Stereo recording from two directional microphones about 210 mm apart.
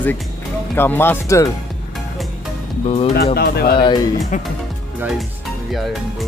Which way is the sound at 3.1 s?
50° left (ahead or behind).